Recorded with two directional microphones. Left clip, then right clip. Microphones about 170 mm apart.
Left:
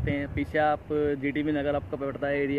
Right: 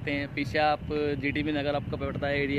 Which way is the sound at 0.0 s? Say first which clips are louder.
Even; 10° right (ahead or behind).